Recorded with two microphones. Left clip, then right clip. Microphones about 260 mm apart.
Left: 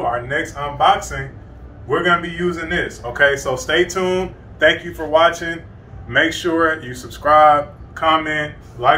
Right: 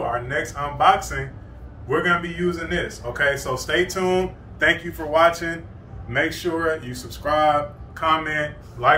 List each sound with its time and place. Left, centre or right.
0.1 s speech: centre